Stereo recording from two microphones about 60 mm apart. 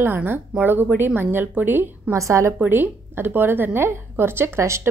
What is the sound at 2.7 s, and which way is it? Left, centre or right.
A woman's voice, right.